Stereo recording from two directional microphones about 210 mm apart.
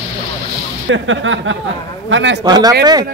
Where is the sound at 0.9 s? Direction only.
65° right (ahead or behind).